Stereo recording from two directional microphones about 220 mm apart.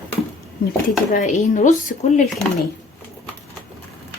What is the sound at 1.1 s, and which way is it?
Speech, 35° left (ahead or behind).